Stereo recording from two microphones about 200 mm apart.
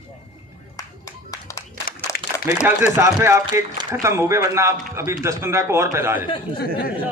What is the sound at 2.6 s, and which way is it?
A man's voice, 10° right (ahead or behind).